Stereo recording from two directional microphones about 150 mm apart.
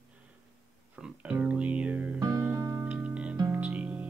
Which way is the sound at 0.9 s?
5° right (ahead or behind).